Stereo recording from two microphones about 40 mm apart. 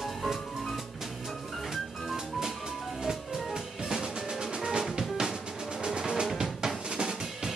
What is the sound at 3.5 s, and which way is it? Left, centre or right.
Drum, centre.